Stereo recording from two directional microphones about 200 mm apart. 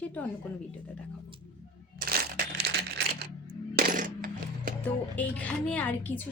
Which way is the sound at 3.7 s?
45° right (ahead or behind).